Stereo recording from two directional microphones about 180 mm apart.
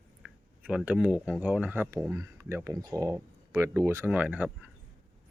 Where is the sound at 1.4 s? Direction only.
10° right (ahead or behind).